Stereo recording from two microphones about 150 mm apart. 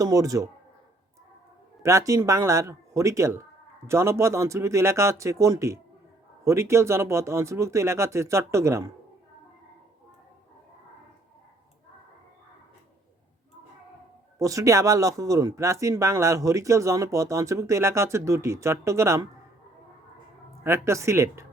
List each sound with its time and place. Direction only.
0.0 s speech: 20° right (ahead or behind)
1.8 s speech: 20° right (ahead or behind)
14.3 s speech: 20° right (ahead or behind)
20.7 s speech: 20° right (ahead or behind)